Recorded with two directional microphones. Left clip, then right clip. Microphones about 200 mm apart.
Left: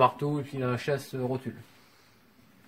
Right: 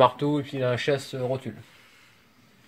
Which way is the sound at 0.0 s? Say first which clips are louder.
Right 4 dB; 35° right (ahead or behind).